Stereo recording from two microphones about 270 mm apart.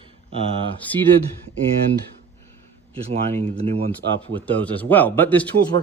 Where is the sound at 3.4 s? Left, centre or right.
Right.